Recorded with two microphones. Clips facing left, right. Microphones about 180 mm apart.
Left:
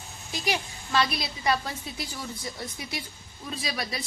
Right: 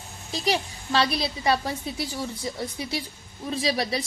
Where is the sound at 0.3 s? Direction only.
30° right (ahead or behind).